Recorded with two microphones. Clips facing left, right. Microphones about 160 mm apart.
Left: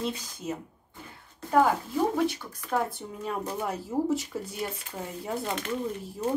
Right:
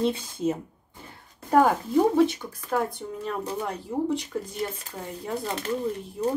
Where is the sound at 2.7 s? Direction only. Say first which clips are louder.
Right 2 dB; centre (ahead or behind).